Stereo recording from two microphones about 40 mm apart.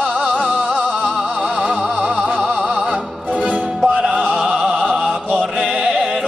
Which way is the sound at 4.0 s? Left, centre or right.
Centre.